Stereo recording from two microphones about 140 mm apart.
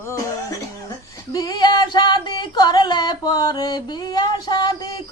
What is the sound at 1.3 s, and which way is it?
Singing, 25° left (ahead or behind).